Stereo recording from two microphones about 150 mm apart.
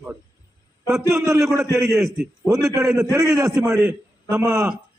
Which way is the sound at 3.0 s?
20° right (ahead or behind).